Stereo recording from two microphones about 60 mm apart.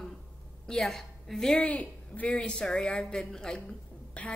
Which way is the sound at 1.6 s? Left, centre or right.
Left.